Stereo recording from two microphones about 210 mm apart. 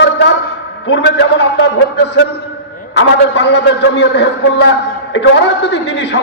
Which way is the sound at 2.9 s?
55° left (ahead or behind).